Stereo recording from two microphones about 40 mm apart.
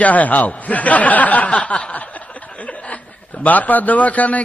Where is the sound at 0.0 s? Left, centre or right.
Left.